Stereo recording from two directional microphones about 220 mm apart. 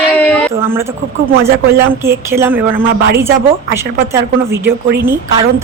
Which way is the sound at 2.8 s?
40° right (ahead or behind).